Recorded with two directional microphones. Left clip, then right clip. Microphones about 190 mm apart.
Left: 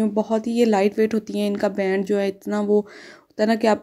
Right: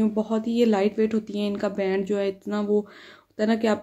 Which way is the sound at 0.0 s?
30° left (ahead or behind).